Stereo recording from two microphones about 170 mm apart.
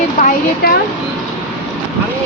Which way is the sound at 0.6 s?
65° left (ahead or behind).